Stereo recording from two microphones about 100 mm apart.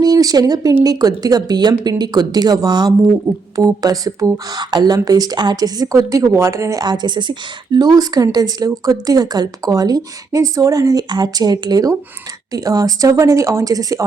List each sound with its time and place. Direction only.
0.0 s speech: 40° right (ahead or behind)